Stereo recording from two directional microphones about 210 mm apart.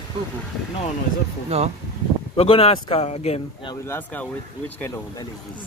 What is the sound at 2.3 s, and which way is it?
A man's voice, 25° left (ahead or behind).